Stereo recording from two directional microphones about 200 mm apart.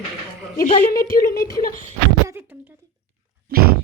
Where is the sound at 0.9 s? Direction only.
45° left (ahead or behind).